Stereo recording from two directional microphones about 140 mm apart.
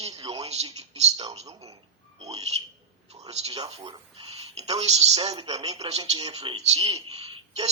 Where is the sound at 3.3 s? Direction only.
45° right (ahead or behind).